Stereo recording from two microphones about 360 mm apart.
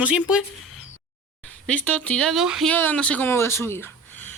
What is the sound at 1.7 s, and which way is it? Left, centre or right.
Speech, centre.